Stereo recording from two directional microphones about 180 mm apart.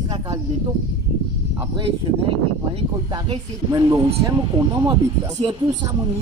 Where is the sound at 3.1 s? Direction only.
20° right (ahead or behind).